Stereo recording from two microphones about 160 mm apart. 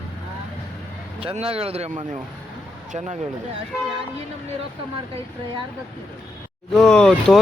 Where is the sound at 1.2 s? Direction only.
35° right (ahead or behind).